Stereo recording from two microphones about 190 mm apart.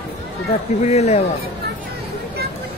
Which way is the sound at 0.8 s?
35° left (ahead or behind).